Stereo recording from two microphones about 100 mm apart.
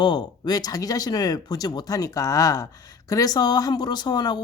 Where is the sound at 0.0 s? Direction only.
45° left (ahead or behind).